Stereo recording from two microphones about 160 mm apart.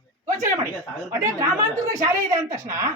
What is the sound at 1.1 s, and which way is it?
Speech, 20° right (ahead or behind).